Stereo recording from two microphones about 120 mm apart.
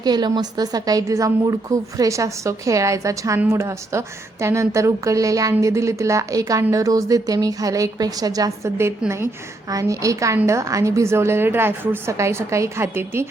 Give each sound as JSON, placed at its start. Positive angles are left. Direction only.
{"t": 0.0, "sound": "a woman's voice", "side_deg": -35}